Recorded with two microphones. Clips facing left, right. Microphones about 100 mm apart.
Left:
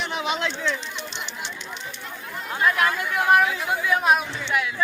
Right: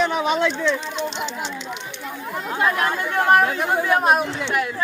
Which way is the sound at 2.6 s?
30° right (ahead or behind).